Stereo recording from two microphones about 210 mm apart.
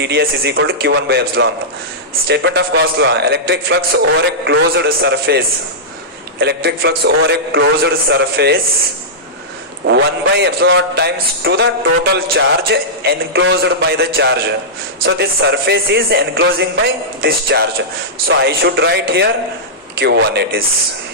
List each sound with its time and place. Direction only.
0.0 s a man's voice: 50° right (ahead or behind)
6.4 s a man's voice: 50° right (ahead or behind)
9.8 s a man's voice: 55° right (ahead or behind)